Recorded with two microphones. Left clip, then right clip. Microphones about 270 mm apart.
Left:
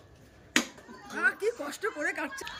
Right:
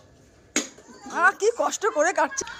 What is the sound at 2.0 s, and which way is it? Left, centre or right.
Speech, right.